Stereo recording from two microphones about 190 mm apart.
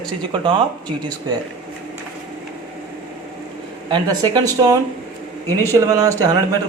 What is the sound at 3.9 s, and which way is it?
Speech, 20° right (ahead or behind).